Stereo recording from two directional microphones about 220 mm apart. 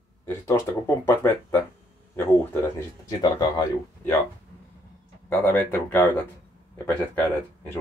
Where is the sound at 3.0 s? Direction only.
15° left (ahead or behind).